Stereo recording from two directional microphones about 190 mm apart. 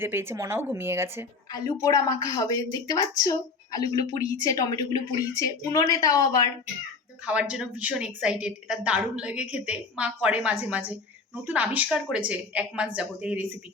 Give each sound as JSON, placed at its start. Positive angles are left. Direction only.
{"t": 0.0, "sound": "speech", "side_deg": -10}
{"t": 1.5, "sound": "a woman's voice", "side_deg": 20}
{"t": 7.3, "sound": "a woman's voice", "side_deg": -5}